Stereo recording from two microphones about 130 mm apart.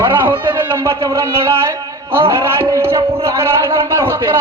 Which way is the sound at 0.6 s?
20° right (ahead or behind).